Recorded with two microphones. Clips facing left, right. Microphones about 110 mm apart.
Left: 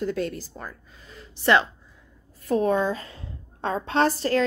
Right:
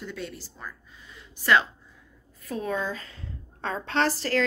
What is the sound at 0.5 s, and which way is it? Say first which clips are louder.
Speech: left 3 dB; 65° left (ahead or behind).